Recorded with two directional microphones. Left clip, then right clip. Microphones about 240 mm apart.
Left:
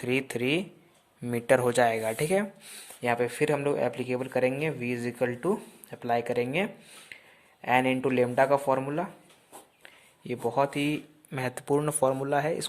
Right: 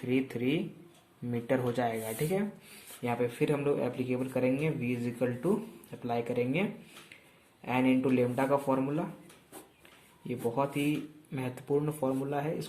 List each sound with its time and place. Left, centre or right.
0.0 s speech: left